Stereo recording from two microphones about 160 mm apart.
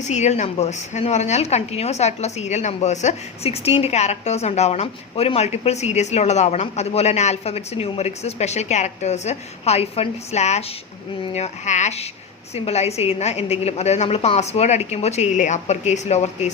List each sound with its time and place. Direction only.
0.0 s a woman's voice: 45° left (ahead or behind)